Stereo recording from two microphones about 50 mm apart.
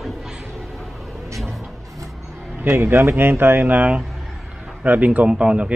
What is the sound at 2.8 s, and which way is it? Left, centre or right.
A man's voice, right.